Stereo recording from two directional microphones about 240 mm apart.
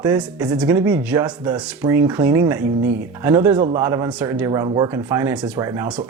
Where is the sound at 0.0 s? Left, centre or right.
Centre.